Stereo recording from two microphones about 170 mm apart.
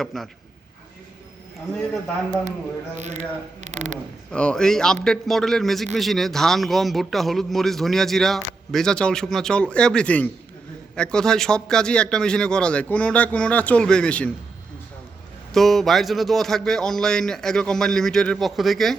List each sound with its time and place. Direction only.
0.0 s a man's voice: centre (ahead or behind)
3.0 s speech: 45° right (ahead or behind)
4.3 s a man's voice: 5° left (ahead or behind)
15.5 s a man's voice: centre (ahead or behind)